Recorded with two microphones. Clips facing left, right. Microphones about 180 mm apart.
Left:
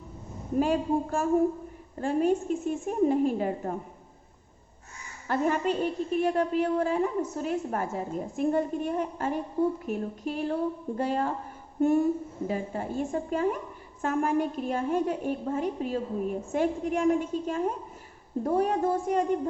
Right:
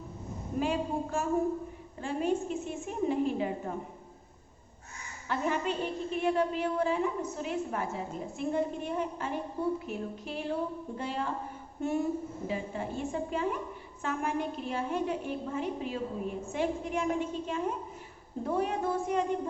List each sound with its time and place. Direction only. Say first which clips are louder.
0.6 s a woman's voice: left 5 dB; 45° left (ahead or behind)
5.3 s a woman's voice: left 5 dB; 45° left (ahead or behind)